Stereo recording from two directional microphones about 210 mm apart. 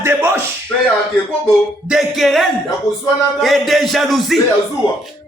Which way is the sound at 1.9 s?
Centre (ahead or behind).